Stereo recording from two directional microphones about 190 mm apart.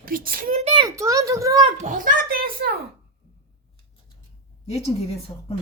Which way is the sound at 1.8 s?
45° right (ahead or behind).